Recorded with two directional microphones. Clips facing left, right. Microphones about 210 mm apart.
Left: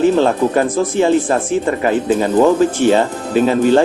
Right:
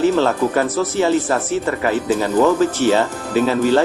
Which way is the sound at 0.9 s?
15° left (ahead or behind).